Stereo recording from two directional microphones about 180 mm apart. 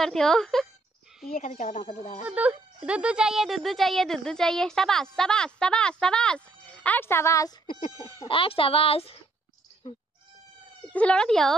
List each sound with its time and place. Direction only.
0.0 s a woman's voice: centre (ahead or behind)
1.3 s speech: 45° left (ahead or behind)
2.2 s speech: 10° right (ahead or behind); by 7.5 s 15° left (ahead or behind)
7.9 s speech: 25° left (ahead or behind)
10.9 s speech: 5° left (ahead or behind)